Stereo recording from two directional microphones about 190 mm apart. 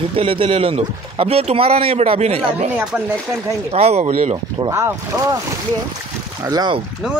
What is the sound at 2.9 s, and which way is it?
Speech, 5° right (ahead or behind).